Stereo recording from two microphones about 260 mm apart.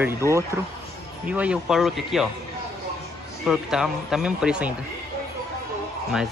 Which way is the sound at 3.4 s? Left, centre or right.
Centre.